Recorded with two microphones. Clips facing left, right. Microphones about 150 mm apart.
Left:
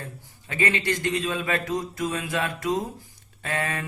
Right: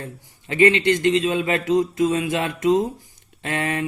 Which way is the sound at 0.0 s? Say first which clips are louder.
Right 5 dB; 25° right (ahead or behind).